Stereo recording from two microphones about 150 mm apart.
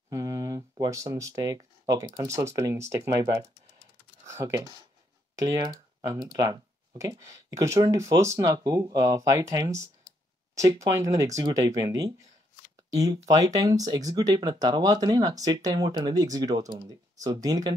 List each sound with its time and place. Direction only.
0.1 s speech: 25° right (ahead or behind)